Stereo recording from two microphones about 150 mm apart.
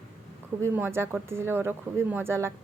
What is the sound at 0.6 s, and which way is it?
Speech, 15° right (ahead or behind).